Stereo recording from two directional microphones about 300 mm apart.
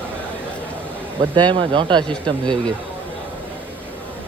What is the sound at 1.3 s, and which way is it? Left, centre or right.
Speech, centre.